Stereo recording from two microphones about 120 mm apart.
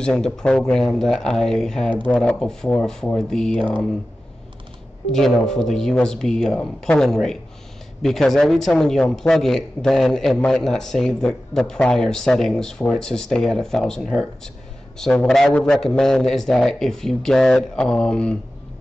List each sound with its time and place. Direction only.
0.0 s speech: 5° left (ahead or behind)
5.1 s speech: 5° left (ahead or behind)